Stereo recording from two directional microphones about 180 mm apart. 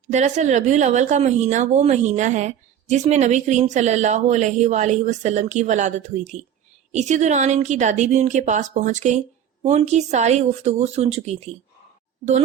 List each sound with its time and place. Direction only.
0.1 s speech: 40° right (ahead or behind)